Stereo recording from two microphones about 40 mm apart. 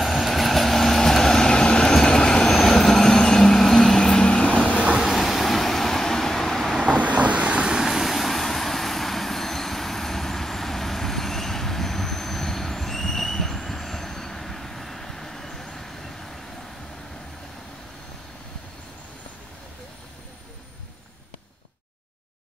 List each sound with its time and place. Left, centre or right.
0.0 s vehicle: centre; by 4.7 s left
4.7 s vehicle: right
5.0 s vehicle: centre
6.8 s vehicle: right
7.7 s vehicle: centre